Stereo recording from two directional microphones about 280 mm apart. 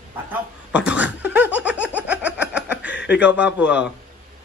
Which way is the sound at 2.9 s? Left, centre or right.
Left.